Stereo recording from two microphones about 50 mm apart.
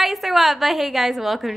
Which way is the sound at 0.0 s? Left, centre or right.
Centre.